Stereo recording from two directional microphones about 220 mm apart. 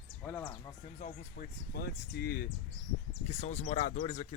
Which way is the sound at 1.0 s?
40° left (ahead or behind).